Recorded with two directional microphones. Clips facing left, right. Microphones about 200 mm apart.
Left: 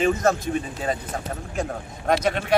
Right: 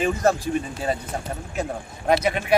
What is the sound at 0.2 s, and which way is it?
Speech, 35° right (ahead or behind).